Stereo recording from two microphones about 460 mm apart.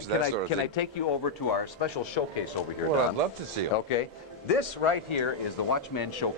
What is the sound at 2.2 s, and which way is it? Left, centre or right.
Speech, left.